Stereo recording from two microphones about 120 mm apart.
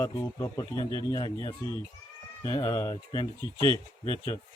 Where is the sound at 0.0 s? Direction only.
30° left (ahead or behind).